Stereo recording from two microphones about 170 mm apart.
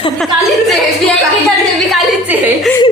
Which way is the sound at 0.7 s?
Centre (ahead or behind).